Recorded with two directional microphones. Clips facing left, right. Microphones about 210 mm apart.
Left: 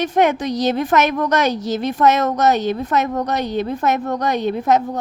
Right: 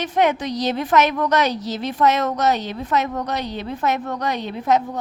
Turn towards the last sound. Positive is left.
turn(degrees=45)  # may be behind; listen again after turning